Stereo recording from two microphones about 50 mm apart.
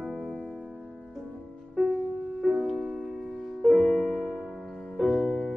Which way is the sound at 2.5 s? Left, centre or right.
Centre.